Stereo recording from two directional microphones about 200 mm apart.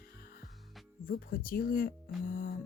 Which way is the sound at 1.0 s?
45° left (ahead or behind).